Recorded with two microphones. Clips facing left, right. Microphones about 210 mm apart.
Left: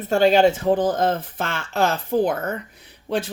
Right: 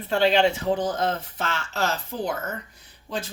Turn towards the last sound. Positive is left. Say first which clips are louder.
# left 7 dB
turn(degrees=60)  # may be behind; listen again after turning